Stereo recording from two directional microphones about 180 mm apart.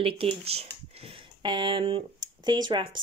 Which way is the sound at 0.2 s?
35° right (ahead or behind).